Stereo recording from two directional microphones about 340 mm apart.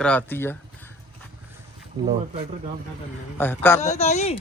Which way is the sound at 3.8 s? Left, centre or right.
Centre.